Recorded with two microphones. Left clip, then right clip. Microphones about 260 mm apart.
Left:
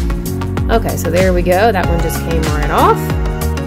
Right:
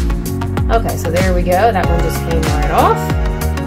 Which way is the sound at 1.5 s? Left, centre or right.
Left.